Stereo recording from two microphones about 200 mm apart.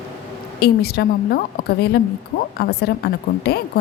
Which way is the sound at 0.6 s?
50° left (ahead or behind).